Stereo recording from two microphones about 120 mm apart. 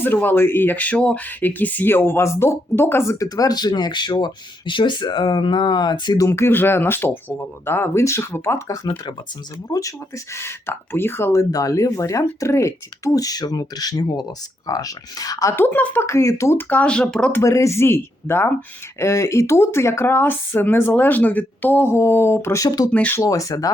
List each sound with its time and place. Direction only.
0.0 s speech: 15° left (ahead or behind); by 6.2 s 35° left (ahead or behind)
6.2 s speech: 20° left (ahead or behind)
10.3 s speech: 20° left (ahead or behind)
15.6 s speech: 15° left (ahead or behind)
17.3 s speech: 25° left (ahead or behind)
22.9 s speech: 15° left (ahead or behind)
23.2 s speech: 30° left (ahead or behind)